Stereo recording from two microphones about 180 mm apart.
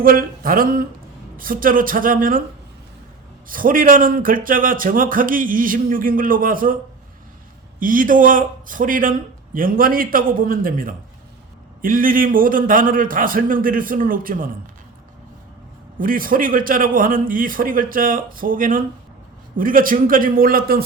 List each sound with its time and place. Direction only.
0.0 s speech: 55° right (ahead or behind)
3.5 s speech: 50° right (ahead or behind)
7.8 s speech: 50° right (ahead or behind)
16.0 s speech: 50° right (ahead or behind)